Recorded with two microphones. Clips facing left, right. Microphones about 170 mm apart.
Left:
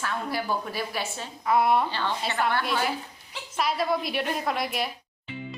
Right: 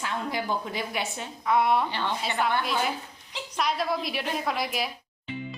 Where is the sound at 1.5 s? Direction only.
Centre (ahead or behind).